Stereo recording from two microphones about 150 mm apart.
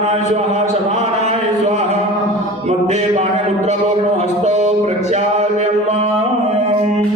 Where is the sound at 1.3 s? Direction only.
45° right (ahead or behind).